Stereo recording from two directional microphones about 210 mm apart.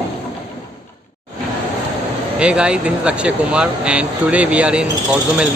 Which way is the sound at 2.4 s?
5° right (ahead or behind).